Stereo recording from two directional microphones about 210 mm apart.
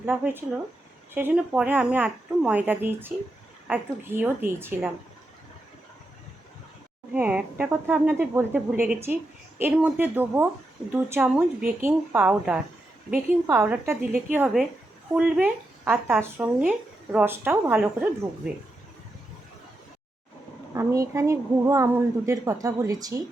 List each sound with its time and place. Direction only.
0.0 s speech: 10° right (ahead or behind)
7.1 s speech: 5° right (ahead or behind)
20.7 s speech: 15° right (ahead or behind)